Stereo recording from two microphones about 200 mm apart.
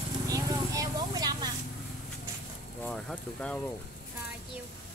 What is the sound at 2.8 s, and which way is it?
Speech, 5° left (ahead or behind).